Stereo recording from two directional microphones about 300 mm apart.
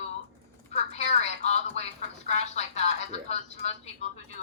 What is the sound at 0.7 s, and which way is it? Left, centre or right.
A woman's voice, left.